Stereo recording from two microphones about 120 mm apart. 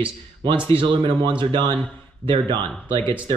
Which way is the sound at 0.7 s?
45° right (ahead or behind).